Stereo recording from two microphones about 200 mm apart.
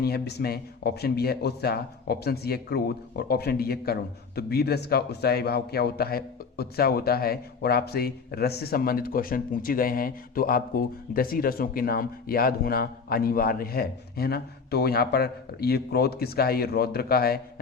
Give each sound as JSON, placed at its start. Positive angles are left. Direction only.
{"t": 0.0, "sound": "a man's voice", "side_deg": 55}